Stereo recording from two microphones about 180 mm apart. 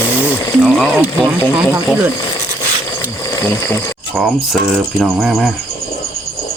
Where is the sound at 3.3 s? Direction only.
15° left (ahead or behind).